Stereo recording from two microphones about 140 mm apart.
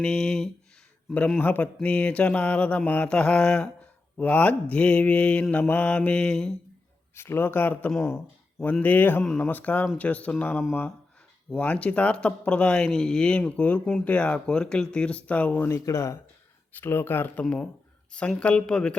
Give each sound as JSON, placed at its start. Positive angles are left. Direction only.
{"t": 0.0, "sound": "speech", "side_deg": 5}
{"t": 1.1, "sound": "mantra", "side_deg": 10}
{"t": 7.2, "sound": "mantra", "side_deg": 15}
{"t": 15.7, "sound": "speech", "side_deg": 20}
{"t": 16.8, "sound": "mantra", "side_deg": 15}
{"t": 17.4, "sound": "speech", "side_deg": 5}
{"t": 18.1, "sound": "mantra", "side_deg": 5}